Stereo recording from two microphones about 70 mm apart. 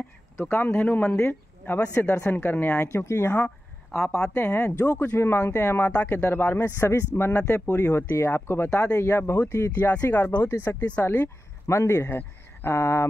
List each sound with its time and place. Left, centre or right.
0.4 s speech: left
1.1 s speech: left
3.9 s speech: centre
4.4 s speech: left
9.0 s speech: left